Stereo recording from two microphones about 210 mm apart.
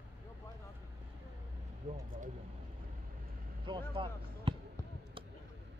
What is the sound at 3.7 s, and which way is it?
Speech, 25° right (ahead or behind).